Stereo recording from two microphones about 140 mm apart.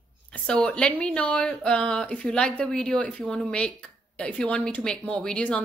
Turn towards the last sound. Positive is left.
turn(degrees=5)  # may be behind; listen again after turning